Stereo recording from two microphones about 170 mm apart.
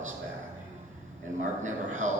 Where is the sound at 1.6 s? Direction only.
45° right (ahead or behind).